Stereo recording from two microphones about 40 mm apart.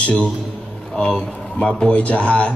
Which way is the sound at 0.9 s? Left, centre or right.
Left.